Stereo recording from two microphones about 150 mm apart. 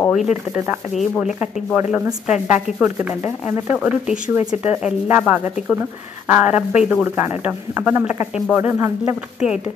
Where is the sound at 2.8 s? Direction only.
20° right (ahead or behind).